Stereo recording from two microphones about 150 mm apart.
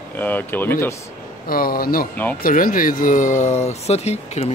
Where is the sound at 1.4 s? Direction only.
75° left (ahead or behind).